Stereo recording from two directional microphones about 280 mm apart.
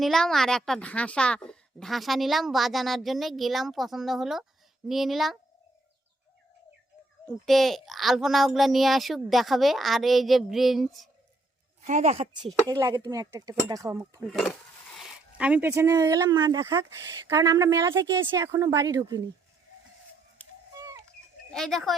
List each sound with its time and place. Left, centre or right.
0.0 s a woman's voice: centre
7.3 s a woman's voice: centre
11.9 s a woman's voice: right
14.3 s a woman's voice: centre
20.7 s a sound: centre
21.5 s a woman's voice: centre